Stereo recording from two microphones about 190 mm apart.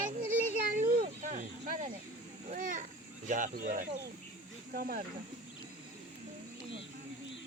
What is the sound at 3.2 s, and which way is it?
Speech, 45° right (ahead or behind).